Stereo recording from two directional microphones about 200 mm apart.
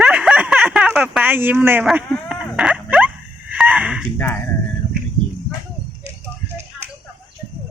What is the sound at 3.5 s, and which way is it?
Wheeze, 5° right (ahead or behind).